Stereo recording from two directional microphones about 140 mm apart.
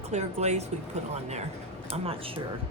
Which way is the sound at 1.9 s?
45° right (ahead or behind).